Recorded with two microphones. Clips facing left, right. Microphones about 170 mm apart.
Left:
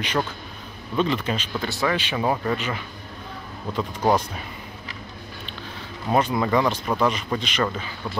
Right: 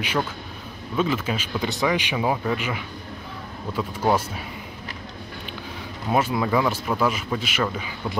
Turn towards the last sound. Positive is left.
turn(degrees=-5)  # may be behind; listen again after turning